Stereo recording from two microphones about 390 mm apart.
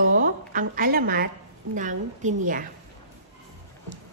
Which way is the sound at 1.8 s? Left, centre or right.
Centre.